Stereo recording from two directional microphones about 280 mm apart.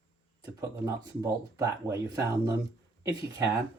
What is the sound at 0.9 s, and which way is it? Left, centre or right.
Speech, centre.